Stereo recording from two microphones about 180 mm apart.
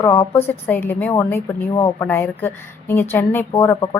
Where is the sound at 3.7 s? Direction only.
20° left (ahead or behind).